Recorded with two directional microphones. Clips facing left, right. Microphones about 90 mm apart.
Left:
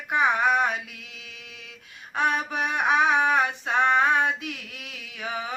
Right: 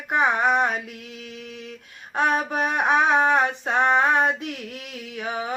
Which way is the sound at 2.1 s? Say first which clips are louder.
Right 3 dB; 40° right (ahead or behind).